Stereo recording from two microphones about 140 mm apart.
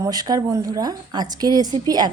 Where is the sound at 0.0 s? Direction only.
30° right (ahead or behind).